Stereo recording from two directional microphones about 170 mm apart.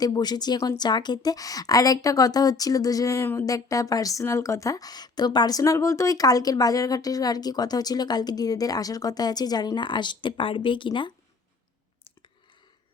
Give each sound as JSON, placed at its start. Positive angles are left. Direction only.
{"t": 0.0, "sound": "a woman's voice", "side_deg": 25}